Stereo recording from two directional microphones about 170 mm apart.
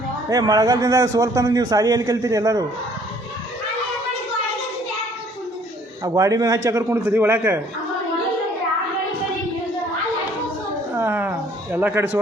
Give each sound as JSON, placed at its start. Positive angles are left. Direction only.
{"t": 0.3, "sound": "a man's voice", "side_deg": -20}
{"t": 6.0, "sound": "a man's voice", "side_deg": -20}
{"t": 10.9, "sound": "a sound", "side_deg": -10}